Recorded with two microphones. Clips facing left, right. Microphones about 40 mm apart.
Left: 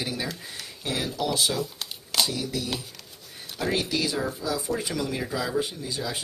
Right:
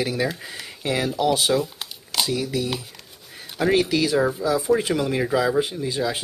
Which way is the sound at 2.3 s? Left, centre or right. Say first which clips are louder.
Right 6 dB; right.